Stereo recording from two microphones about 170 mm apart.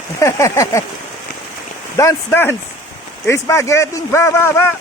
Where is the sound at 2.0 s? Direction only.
15° left (ahead or behind).